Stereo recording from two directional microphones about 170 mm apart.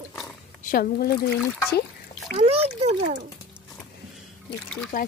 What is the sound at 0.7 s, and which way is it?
Speech, 60° left (ahead or behind).